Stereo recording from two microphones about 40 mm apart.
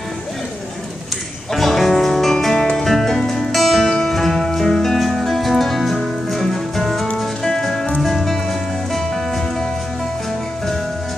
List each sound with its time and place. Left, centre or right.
1.5 s music: centre
2.8 s music: centre
3.5 s music: centre